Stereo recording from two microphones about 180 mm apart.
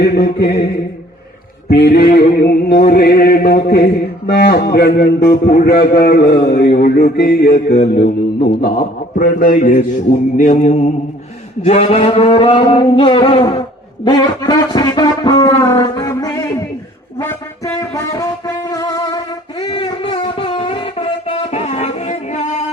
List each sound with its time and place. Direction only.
0.0 s mantra: 65° left (ahead or behind)
1.7 s mantra: 60° left (ahead or behind)
8.4 s a man's voice: 55° left (ahead or behind)
10.3 s mantra: 45° left (ahead or behind)
11.6 s a sound: 35° left (ahead or behind); by 16.6 s 15° left (ahead or behind)
17.2 s music: 15° left (ahead or behind)
19.5 s a sound: 35° left (ahead or behind)